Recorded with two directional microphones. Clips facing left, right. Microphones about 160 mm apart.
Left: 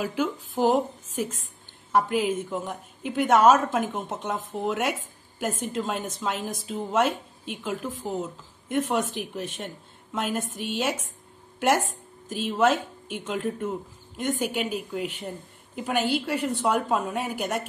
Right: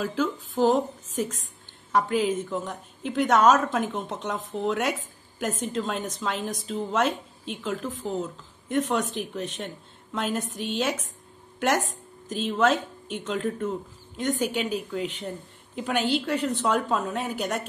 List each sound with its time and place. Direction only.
0.0 s a woman's voice: 10° left (ahead or behind)
10.5 s speech: 55° left (ahead or behind)
10.8 s a woman's voice: 10° left (ahead or behind)
12.3 s a woman's voice: 10° left (ahead or behind)